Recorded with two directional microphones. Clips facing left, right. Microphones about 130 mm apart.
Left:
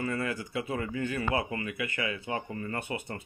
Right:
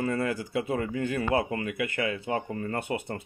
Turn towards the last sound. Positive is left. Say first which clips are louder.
# right 4 dB
turn(degrees=-40)  # may be behind; listen again after turning